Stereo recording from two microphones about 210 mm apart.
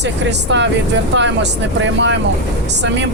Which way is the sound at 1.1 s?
60° right (ahead or behind).